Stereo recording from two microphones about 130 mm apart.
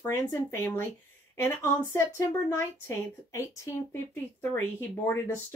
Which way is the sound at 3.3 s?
25° left (ahead or behind).